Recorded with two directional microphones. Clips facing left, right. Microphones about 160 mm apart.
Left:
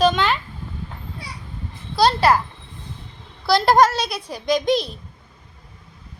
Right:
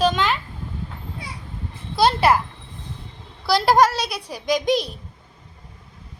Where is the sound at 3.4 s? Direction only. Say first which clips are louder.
Left 1 dB; 10° right (ahead or behind).